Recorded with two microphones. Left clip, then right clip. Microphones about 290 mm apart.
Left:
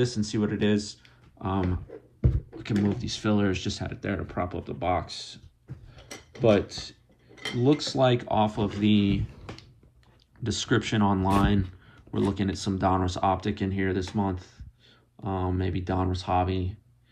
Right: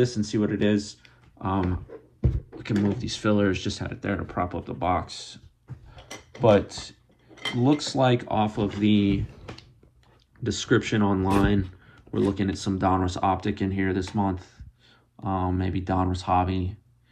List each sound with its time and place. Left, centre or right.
0.0 s speech: centre
2.3 s beatboxing: centre
3.0 s speech: centre
6.4 s speech: centre
10.4 s speech: centre